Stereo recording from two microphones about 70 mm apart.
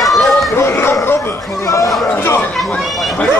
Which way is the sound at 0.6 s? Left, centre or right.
Left.